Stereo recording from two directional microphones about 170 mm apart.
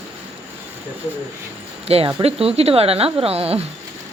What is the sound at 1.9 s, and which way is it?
A woman's voice, 30° right (ahead or behind).